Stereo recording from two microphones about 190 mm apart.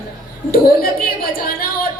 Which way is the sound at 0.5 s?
50° left (ahead or behind).